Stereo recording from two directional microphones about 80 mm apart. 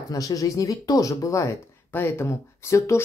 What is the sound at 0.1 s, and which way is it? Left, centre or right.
Speech, left.